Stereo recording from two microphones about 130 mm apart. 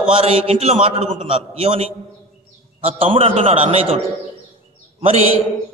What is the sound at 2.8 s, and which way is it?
A man's voice, 45° right (ahead or behind).